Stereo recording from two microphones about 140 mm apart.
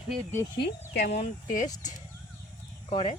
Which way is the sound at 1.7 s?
25° left (ahead or behind).